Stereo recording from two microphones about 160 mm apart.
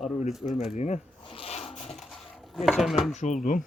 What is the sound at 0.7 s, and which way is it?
Zipper, 45° left (ahead or behind).